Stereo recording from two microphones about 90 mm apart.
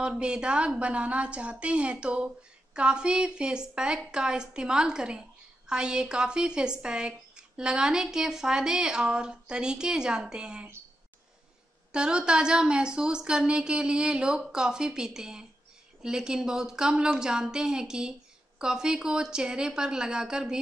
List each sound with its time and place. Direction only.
0.2 s speech: 10° right (ahead or behind)
11.9 s speech: 10° right (ahead or behind)